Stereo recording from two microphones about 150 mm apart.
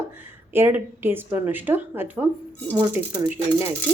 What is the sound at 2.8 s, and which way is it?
Speech, 25° right (ahead or behind).